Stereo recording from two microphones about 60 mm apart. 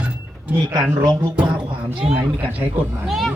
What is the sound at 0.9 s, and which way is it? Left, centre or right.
Speech, right.